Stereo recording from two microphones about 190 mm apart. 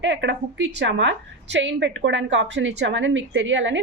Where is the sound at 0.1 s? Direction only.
70° right (ahead or behind).